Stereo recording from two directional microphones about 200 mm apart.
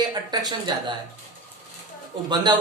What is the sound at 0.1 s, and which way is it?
Speech, 20° right (ahead or behind).